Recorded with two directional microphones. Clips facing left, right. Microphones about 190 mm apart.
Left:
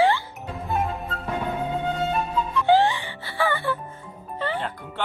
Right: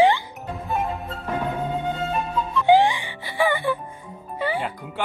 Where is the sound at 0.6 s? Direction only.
Centre (ahead or behind).